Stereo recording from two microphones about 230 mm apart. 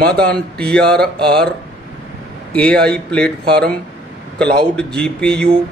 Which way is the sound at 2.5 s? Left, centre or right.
Centre.